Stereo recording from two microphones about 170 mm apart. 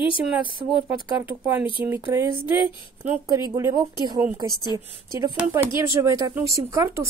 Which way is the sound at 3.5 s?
20° right (ahead or behind).